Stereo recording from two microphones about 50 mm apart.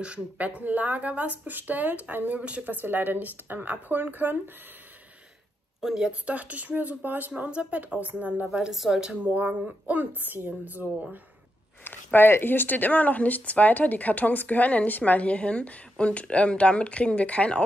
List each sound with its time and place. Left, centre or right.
0.0 s speech: right
2.6 s speech: right
5.8 s a woman's voice: centre
6.2 s speech: right
8.5 s a woman's voice: centre
9.1 s speech: right
11.8 s speech: left